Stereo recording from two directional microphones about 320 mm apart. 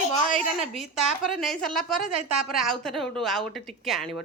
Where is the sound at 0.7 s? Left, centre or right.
Centre.